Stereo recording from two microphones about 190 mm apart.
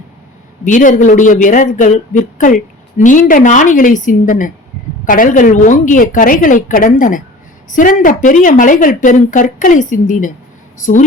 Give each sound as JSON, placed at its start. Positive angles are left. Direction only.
{"t": 0.6, "sound": "a woman's voice", "side_deg": 40}